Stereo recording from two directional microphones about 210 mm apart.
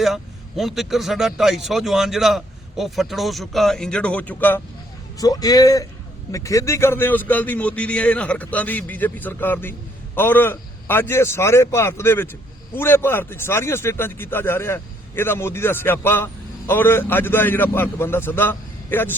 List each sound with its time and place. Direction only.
0.0 s a man's voice: centre (ahead or behind)